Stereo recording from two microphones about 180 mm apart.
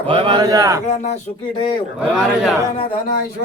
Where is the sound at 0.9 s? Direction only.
40° left (ahead or behind).